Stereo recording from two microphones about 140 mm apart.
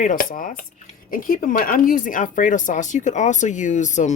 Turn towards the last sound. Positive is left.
turn(degrees=60)  # may be behind; listen again after turning